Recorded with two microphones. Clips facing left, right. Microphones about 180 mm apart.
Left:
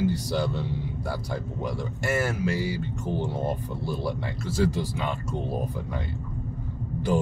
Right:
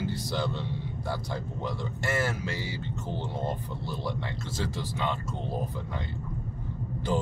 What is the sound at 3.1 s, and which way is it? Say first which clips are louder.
Speech: left 5 dB; 15° left (ahead or behind).